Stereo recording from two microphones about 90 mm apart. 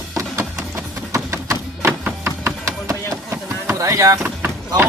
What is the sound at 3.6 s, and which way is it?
Speech, 35° right (ahead or behind).